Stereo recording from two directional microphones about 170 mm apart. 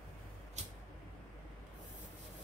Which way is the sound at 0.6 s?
40° right (ahead or behind).